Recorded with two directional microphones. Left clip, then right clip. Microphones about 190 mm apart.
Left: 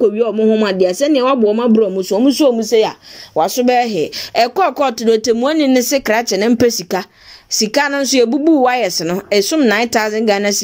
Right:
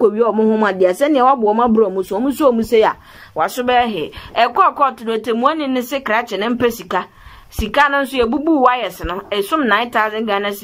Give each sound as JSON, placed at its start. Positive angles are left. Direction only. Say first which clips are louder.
{"t": 0.0, "sound": "speech", "louder": "even", "side_deg": 5}
{"t": 3.3, "sound": "speech", "louder": "left 2 dB", "side_deg": 20}